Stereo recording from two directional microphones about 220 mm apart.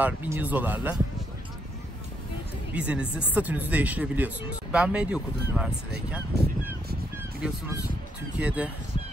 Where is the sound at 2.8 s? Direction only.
5° right (ahead or behind).